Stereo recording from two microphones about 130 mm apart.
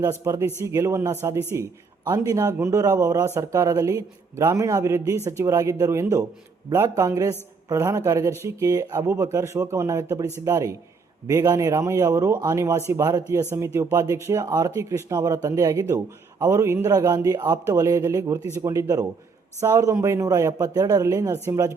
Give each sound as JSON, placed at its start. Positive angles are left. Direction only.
{"t": 0.0, "sound": "speech", "side_deg": -20}